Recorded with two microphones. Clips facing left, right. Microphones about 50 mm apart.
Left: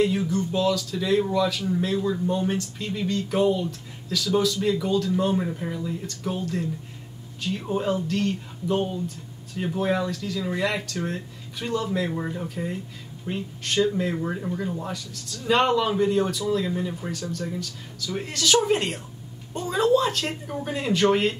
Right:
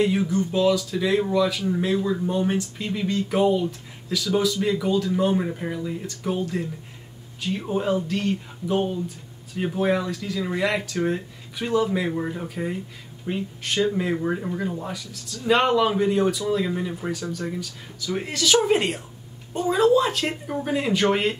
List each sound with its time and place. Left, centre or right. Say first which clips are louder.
0.0 s speech: right 1 dB; centre